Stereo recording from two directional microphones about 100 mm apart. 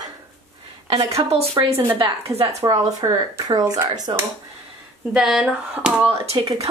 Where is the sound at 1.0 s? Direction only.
90° right.